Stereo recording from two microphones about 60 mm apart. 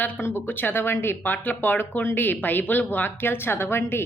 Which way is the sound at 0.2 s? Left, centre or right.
Left.